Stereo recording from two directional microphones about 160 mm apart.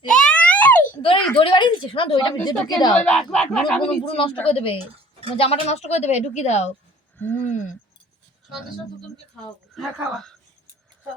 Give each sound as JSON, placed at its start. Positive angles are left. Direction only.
{"t": 0.3, "sound": "a sound", "side_deg": 10}
{"t": 1.4, "sound": "a woman's voice", "side_deg": 30}
{"t": 2.9, "sound": "speech", "side_deg": 5}
{"t": 4.0, "sound": "a man's voice", "side_deg": 35}
{"t": 7.2, "sound": "speech", "side_deg": 10}
{"t": 9.7, "sound": "speech", "side_deg": 0}